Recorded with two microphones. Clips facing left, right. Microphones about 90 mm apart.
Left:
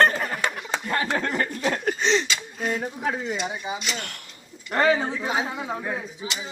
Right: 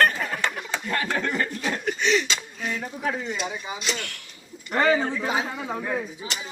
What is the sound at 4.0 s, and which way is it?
Speech, 45° left (ahead or behind).